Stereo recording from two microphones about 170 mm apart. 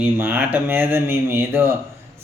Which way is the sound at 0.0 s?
10° right (ahead or behind).